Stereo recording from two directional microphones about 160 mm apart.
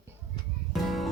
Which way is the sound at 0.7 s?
Centre (ahead or behind).